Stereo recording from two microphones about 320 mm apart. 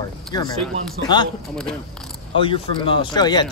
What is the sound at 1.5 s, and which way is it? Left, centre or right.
Speech, centre.